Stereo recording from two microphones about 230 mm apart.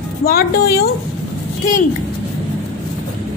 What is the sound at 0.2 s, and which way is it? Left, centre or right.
Speech, left.